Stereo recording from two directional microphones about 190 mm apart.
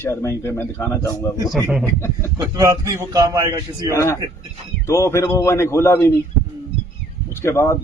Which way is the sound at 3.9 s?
15° left (ahead or behind).